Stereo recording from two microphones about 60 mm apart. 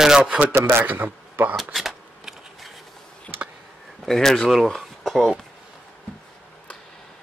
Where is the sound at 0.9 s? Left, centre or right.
Right.